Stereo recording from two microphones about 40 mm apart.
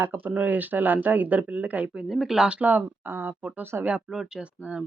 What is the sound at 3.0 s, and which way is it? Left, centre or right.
Speech, right.